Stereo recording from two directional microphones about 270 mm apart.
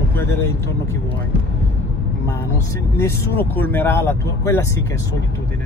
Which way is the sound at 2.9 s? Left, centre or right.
Centre.